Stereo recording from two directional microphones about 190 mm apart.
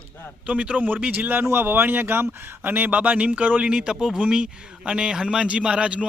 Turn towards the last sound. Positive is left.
turn(degrees=-5)  # may be behind; listen again after turning